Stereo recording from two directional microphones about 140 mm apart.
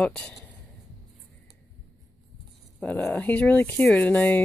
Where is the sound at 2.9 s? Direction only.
15° left (ahead or behind).